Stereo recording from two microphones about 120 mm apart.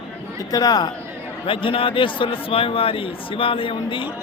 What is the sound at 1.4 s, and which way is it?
A man's voice, 45° left (ahead or behind).